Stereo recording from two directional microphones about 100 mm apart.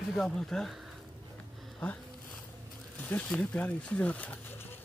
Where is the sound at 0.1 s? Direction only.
5° left (ahead or behind).